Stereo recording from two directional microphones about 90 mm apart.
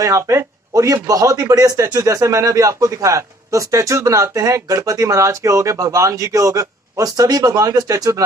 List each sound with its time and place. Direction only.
0.0 s speech: 35° right (ahead or behind)